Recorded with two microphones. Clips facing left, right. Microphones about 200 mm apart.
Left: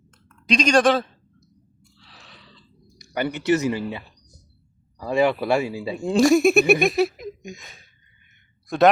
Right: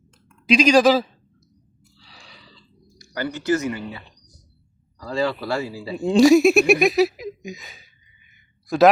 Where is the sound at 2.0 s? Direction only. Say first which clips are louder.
Right 1 dB; centre (ahead or behind).